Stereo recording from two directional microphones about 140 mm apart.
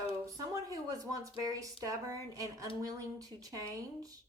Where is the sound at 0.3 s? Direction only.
25° right (ahead or behind).